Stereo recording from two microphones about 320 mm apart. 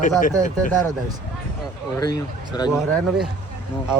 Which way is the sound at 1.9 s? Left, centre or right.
Centre.